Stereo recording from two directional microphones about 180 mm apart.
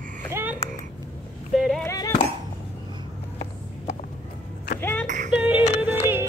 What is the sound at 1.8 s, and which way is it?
Music, 20° left (ahead or behind).